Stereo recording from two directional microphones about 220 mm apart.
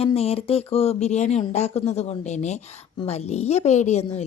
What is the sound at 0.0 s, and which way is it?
Speech, 25° left (ahead or behind).